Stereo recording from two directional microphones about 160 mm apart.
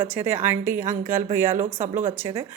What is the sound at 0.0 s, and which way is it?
A woman's voice, 15° right (ahead or behind).